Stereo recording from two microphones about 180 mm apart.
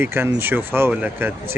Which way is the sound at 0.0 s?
10° right (ahead or behind).